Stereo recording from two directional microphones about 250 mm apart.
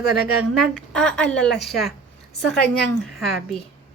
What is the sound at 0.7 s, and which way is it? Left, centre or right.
A woman's voice, centre.